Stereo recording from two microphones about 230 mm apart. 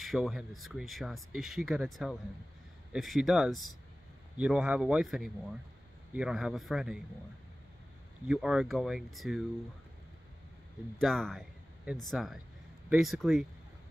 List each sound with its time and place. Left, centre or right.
0.0 s speech: centre
8.3 s speech: centre
11.0 s speech: centre